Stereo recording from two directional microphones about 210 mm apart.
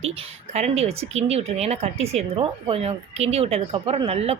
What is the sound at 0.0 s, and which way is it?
A woman's voice, 30° right (ahead or behind).